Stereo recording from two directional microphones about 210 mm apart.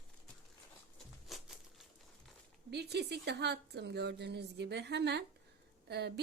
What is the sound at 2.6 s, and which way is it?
A woman's voice, 50° right (ahead or behind).